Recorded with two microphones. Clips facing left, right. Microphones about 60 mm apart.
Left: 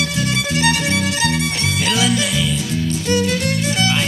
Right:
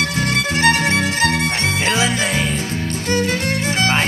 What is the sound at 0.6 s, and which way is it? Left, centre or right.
Violin, right.